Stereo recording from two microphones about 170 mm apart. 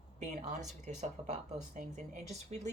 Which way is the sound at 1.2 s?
30° right (ahead or behind).